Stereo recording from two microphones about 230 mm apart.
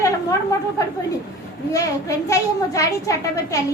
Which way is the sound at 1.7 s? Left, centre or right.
Centre.